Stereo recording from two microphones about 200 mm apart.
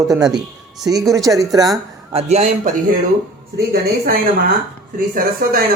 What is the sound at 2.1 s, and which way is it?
Speech, 30° right (ahead or behind).